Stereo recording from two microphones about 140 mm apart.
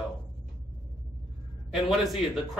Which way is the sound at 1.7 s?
Centre (ahead or behind).